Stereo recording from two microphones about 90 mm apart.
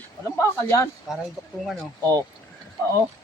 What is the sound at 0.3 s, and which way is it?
Speech, 35° left (ahead or behind).